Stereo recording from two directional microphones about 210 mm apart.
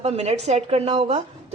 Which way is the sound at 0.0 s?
30° right (ahead or behind).